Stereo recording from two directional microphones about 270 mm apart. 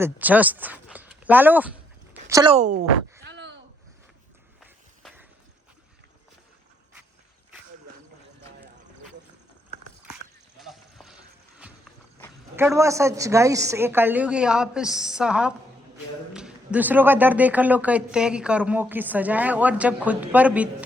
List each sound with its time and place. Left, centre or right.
0.0 s speech: centre
2.3 s speech: centre
3.2 s a sound: right
4.6 s a sound: centre
10.6 s clip-clop: centre
12.5 s a woman's voice: centre